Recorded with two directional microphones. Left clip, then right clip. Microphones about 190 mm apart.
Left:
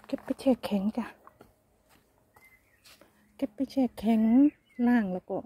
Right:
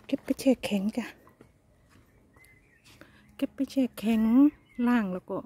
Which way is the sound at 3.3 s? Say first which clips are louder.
Right 1 dB; 20° right (ahead or behind).